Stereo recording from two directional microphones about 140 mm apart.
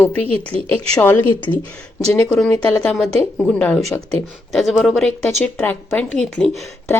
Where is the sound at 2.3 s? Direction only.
5° left (ahead or behind).